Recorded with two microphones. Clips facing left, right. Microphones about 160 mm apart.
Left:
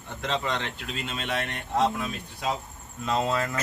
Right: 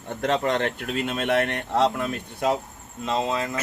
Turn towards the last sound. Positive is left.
turn(degrees=-20)  # may be behind; listen again after turning